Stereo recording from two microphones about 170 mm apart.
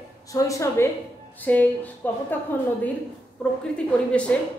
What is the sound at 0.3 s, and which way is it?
A woman's voice, 20° left (ahead or behind).